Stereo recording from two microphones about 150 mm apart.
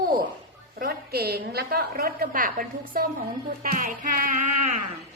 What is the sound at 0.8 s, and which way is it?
A woman's voice, 90° right.